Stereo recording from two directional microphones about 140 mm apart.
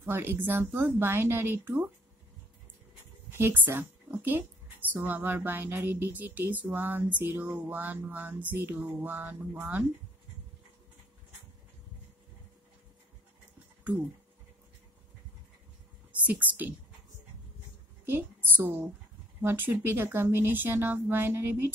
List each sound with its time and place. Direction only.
0.0 s speech: 15° right (ahead or behind)
3.3 s speech: 15° right (ahead or behind)
16.2 s speech: 10° right (ahead or behind)
18.0 s a woman's voice: 15° right (ahead or behind)